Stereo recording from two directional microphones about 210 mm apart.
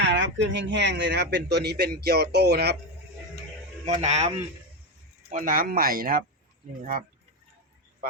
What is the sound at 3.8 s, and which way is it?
A man's voice, 30° right (ahead or behind).